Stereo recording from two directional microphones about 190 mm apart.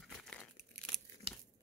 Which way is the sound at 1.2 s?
30° right (ahead or behind).